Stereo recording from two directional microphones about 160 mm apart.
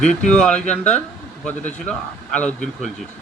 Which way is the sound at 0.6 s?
45° left (ahead or behind).